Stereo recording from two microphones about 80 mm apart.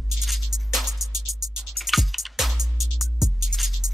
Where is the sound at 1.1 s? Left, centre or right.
Right.